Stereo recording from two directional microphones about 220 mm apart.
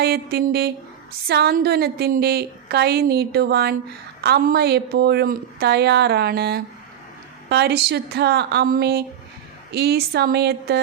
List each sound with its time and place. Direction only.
0.0 s a woman's voice: 45° right (ahead or behind)